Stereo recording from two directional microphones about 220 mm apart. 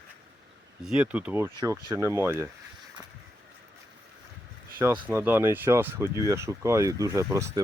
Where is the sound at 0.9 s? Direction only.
5° right (ahead or behind).